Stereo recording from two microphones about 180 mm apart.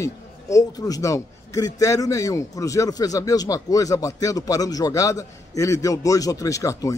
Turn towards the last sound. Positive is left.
turn(degrees=15)  # may be behind; listen again after turning